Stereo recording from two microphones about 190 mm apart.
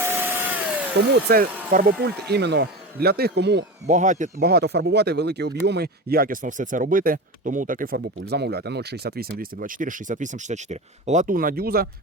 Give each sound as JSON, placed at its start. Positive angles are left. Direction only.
{"t": 0.0, "sound": "vacuum cleaner", "side_deg": -10}
{"t": 1.1, "sound": "speech", "side_deg": -55}
{"t": 2.3, "sound": "speech", "side_deg": -60}
{"t": 3.8, "sound": "speech", "side_deg": -40}